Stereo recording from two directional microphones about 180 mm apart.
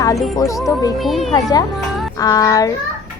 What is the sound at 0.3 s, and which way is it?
Speech, 20° left (ahead or behind).